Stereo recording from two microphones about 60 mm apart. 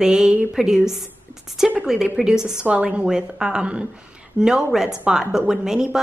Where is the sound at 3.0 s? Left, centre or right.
Centre.